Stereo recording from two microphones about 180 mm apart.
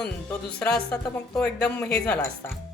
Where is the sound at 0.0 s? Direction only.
5° left (ahead or behind).